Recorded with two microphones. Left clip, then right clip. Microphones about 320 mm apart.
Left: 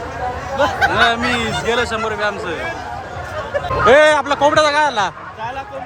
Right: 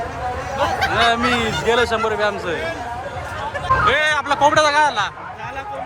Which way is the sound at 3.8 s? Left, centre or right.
Centre.